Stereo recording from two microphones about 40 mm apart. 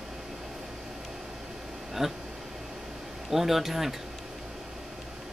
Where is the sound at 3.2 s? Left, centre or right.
Centre.